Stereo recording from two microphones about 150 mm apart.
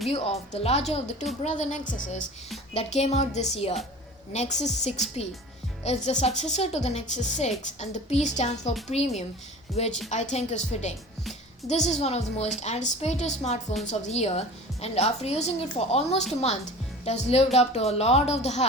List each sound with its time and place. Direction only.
0.6 s a woman's voice: 45° left (ahead or behind)
2.7 s a woman's voice: 45° left (ahead or behind)